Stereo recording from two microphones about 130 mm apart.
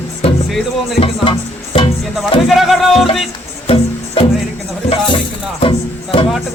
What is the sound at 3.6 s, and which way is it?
Music, 50° left (ahead or behind).